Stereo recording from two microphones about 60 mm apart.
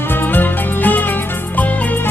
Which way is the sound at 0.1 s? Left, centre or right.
Left.